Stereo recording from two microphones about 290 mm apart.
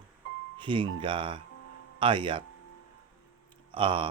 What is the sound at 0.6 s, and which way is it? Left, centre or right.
Speech, centre.